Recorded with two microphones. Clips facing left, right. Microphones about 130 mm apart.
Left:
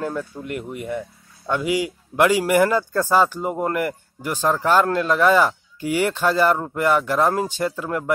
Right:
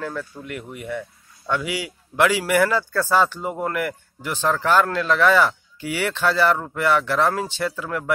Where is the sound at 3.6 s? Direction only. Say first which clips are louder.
Left 1 dB; 40° left (ahead or behind).